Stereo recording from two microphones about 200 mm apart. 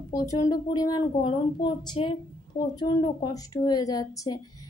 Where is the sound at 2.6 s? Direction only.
45° left (ahead or behind).